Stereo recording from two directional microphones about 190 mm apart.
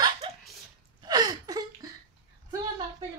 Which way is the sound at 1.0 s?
20° right (ahead or behind).